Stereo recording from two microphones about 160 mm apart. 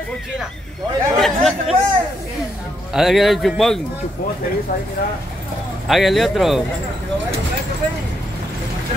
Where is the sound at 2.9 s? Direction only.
Centre (ahead or behind).